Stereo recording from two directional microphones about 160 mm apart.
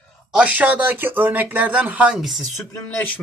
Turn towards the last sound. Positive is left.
turn(degrees=15)  # may be behind; listen again after turning